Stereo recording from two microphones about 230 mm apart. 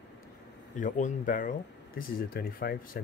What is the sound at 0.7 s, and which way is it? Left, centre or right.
A man's voice, left.